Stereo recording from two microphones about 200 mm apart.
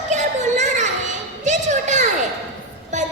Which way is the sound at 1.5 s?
35° right (ahead or behind).